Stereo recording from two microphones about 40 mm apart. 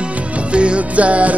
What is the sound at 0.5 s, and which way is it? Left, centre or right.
Music, right.